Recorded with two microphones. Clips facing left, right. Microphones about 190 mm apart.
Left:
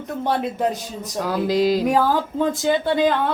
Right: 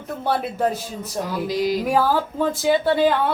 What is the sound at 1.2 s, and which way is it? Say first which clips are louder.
Music: left 4 dB; 90° left.